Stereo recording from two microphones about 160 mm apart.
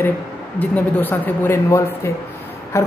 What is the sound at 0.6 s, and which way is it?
A woman's voice, 10° left (ahead or behind).